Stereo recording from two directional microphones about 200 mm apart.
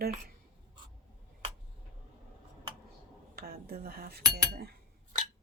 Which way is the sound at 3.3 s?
50° right (ahead or behind).